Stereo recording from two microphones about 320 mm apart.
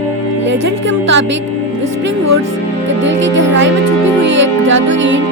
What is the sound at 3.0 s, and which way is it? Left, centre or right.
Speech, right.